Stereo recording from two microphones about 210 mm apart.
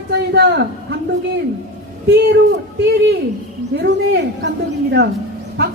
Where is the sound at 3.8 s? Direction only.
60° right (ahead or behind).